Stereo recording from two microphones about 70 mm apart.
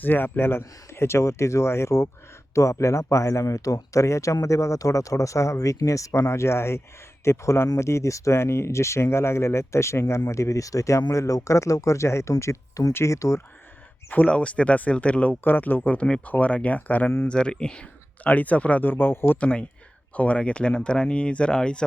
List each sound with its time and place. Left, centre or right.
0.0 s speech: left
14.1 s speech: centre
17.2 s speech: centre; by 19.4 s left
19.4 s speech: centre